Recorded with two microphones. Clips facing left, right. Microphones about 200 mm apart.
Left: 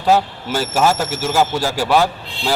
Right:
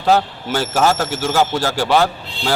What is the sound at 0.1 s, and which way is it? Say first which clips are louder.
A man's voice: even; 5° left (ahead or behind).